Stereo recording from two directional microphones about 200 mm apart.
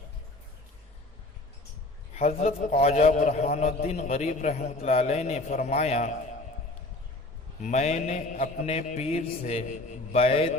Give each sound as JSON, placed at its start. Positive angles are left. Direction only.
{"t": 2.1, "sound": "a man's voice", "side_deg": 35}
{"t": 7.6, "sound": "a man's voice", "side_deg": 35}